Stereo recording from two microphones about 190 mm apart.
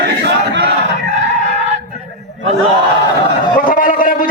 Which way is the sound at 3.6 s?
45° left (ahead or behind).